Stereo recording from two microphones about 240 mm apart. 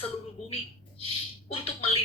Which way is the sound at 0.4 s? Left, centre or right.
Left.